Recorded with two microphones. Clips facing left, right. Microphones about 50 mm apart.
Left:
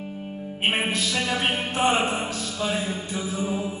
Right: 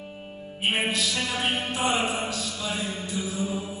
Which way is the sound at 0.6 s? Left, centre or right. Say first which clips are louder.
Left 1 dB; left.